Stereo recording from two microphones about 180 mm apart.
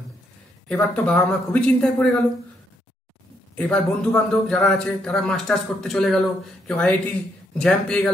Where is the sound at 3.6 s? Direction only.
5° left (ahead or behind).